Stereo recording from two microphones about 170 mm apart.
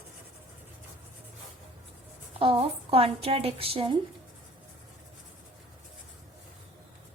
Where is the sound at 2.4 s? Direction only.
35° right (ahead or behind).